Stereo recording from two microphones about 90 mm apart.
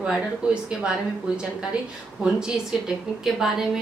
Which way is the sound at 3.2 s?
5° right (ahead or behind).